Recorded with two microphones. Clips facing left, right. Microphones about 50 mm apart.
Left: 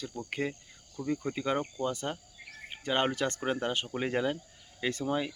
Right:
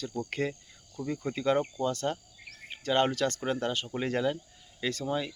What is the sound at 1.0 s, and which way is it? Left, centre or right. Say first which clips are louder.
Speech: even; left.